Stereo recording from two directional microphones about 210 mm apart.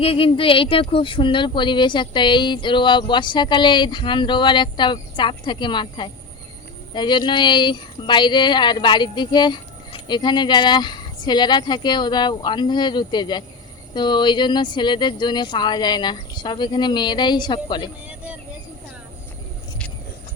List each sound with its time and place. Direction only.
0.0 s speech: 25° left (ahead or behind)